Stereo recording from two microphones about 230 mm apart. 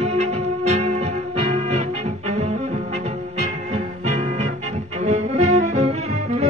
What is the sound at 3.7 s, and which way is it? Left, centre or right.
Music, right.